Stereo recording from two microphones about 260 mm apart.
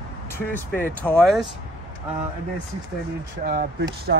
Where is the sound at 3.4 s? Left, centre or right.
Right.